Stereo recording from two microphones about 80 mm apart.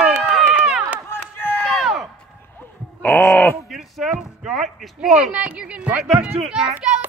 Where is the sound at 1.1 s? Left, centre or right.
Left.